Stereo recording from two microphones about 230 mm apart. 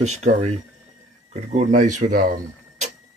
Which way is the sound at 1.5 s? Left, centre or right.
Right.